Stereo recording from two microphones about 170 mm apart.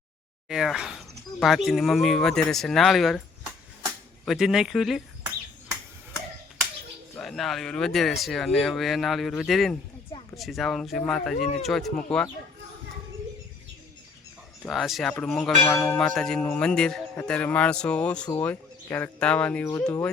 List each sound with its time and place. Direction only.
0.4 s speech: centre (ahead or behind)
4.3 s speech: centre (ahead or behind)
7.2 s speech: centre (ahead or behind)
14.6 s speech: centre (ahead or behind)
16.0 s speech: centre (ahead or behind)